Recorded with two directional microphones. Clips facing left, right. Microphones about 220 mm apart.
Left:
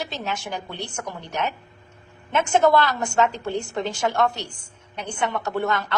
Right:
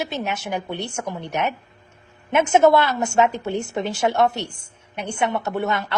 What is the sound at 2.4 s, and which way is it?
A woman's voice, 20° right (ahead or behind).